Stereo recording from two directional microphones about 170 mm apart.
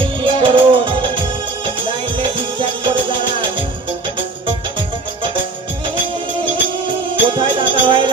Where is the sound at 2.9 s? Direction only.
30° right (ahead or behind).